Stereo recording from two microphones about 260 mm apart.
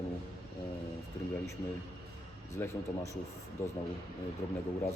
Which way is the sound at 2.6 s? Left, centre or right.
Centre.